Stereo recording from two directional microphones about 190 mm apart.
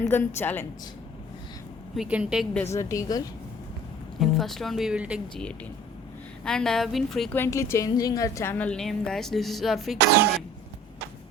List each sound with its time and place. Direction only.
0.0 s a woman's voice: 15° left (ahead or behind)
2.0 s a woman's voice: 5° right (ahead or behind)
2.7 s a woman's voice: 15° left (ahead or behind)
4.2 s a woman's voice: centre (ahead or behind)
6.4 s a woman's voice: 5° left (ahead or behind)